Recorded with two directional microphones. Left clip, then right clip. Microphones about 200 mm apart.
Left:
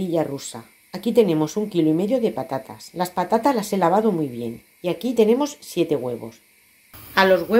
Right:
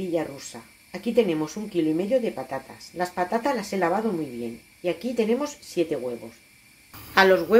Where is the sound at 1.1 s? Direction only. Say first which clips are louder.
Left 5 dB; 35° left (ahead or behind).